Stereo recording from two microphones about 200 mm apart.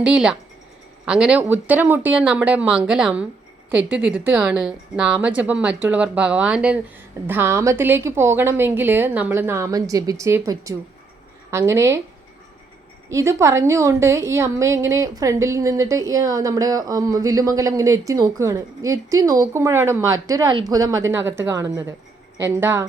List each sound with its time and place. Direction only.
0.0 s a woman's voice: 5° right (ahead or behind)
13.1 s a woman's voice: 15° right (ahead or behind)